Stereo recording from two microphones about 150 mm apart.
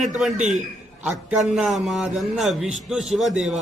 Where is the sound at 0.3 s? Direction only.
50° right (ahead or behind).